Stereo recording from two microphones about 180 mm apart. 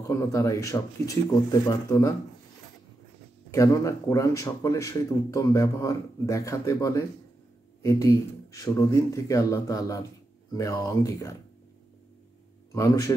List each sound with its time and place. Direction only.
0.0 s speech: 15° left (ahead or behind)
3.5 s speech: 15° left (ahead or behind)
12.7 s a man's voice: 20° left (ahead or behind)